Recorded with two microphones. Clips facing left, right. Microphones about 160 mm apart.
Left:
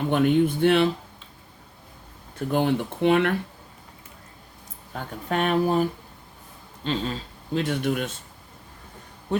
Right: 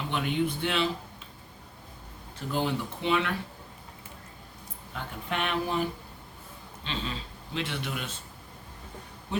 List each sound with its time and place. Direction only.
0.1 s speech: 50° left (ahead or behind)
2.5 s speech: 55° left (ahead or behind)
4.9 s speech: 45° left (ahead or behind)